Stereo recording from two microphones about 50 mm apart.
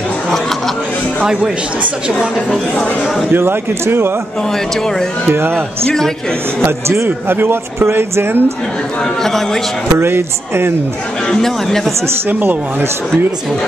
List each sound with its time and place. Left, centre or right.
1.2 s speech: centre
3.3 s speech: right
5.3 s speech: right
6.6 s a man's voice: right
7.1 s speech: right
9.2 s speech: centre
9.9 s speech: right
11.2 s speech: centre
12.3 s speech: right